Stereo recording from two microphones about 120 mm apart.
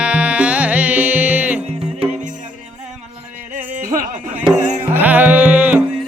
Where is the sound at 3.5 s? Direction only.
90° right.